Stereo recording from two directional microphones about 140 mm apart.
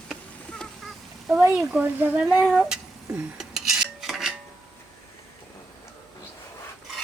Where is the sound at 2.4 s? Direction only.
5° right (ahead or behind).